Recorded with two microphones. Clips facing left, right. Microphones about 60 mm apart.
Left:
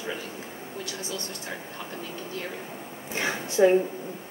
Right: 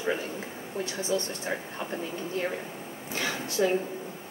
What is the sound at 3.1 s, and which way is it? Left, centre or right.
Speech, left.